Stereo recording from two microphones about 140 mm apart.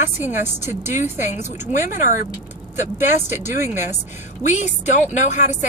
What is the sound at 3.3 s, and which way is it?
A woman's voice, 60° left (ahead or behind).